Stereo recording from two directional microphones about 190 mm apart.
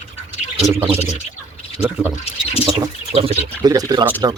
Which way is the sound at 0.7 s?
10° right (ahead or behind).